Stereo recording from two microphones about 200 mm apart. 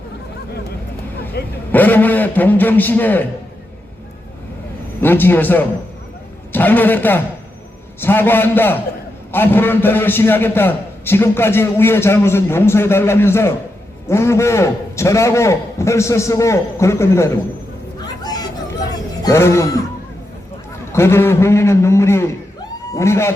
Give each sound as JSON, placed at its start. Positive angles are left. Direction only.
{"t": 1.4, "sound": "vehicle", "side_deg": 55}
{"t": 1.7, "sound": "a man's voice", "side_deg": 10}
{"t": 4.9, "sound": "a man's voice", "side_deg": 10}
{"t": 18.0, "sound": "chatter", "side_deg": 20}
{"t": 19.2, "sound": "a man's voice", "side_deg": 15}
{"t": 20.9, "sound": "a man's voice", "side_deg": 10}